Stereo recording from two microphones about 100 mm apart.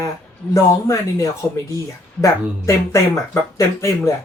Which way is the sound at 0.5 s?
35° left (ahead or behind).